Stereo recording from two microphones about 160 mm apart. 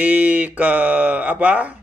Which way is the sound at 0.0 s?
10° right (ahead or behind).